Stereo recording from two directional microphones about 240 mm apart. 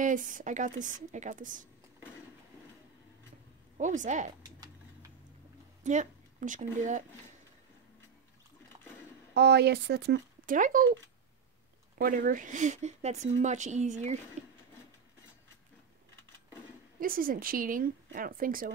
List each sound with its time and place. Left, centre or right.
0.0 s a woman's voice: right
3.7 s a woman's voice: right
5.9 s speech: right
9.3 s speech: right
12.0 s speech: right
17.0 s a woman's voice: right